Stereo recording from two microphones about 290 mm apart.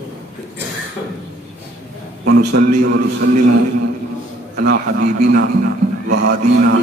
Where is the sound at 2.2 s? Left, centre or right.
Right.